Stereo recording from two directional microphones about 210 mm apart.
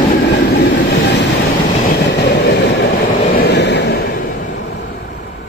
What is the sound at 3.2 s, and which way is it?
Vehicle, 45° left (ahead or behind).